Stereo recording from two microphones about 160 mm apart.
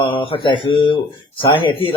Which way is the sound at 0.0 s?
35° left (ahead or behind).